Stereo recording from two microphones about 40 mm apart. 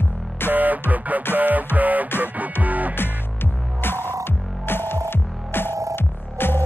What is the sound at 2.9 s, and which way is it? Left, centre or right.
Music, left.